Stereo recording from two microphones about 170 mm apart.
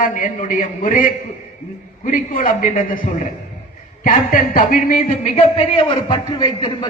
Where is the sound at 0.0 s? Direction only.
50° left (ahead or behind).